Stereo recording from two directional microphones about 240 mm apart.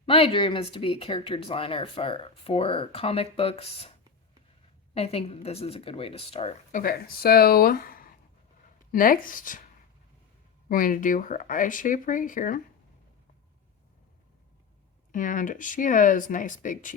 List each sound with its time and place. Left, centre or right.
0.0 s speech: left
4.9 s speech: left
10.7 s speech: left
15.1 s speech: left